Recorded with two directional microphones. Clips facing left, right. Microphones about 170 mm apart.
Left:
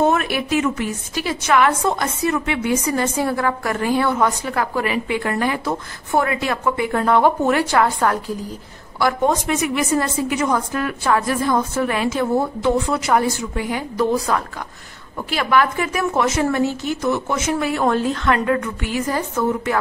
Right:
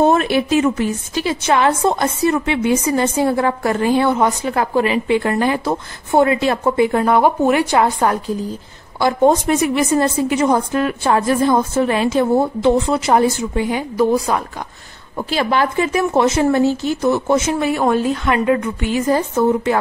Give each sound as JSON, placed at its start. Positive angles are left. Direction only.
{"t": 0.0, "sound": "a woman's voice", "side_deg": -30}
{"t": 9.0, "sound": "a woman's voice", "side_deg": -30}
{"t": 15.1, "sound": "a woman's voice", "side_deg": -30}
{"t": 17.8, "sound": "a woman's voice", "side_deg": -10}